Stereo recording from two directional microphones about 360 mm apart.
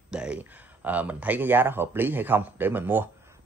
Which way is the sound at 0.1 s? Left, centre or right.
Centre.